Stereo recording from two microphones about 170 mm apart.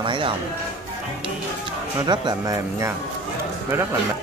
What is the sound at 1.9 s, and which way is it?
Speech, 25° right (ahead or behind).